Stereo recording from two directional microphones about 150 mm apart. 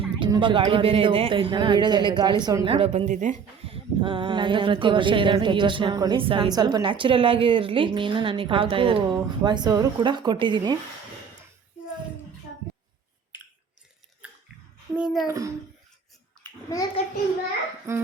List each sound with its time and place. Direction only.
0.2 s speech: 30° right (ahead or behind)
2.7 s a woman's voice: 40° right (ahead or behind); by 3.4 s 55° right (ahead or behind)
3.7 s speech: 35° right (ahead or behind)
14.9 s a child's voice: 5° right (ahead or behind)
15.3 s speech: 20° right (ahead or behind)
16.6 s a child's voice: 25° left (ahead or behind)
17.9 s speech: 20° right (ahead or behind)